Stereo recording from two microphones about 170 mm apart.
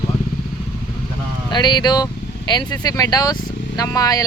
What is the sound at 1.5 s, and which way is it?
Speech, 25° left (ahead or behind).